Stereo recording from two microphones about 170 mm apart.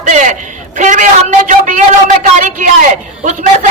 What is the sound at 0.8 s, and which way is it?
A man's voice, 50° right (ahead or behind).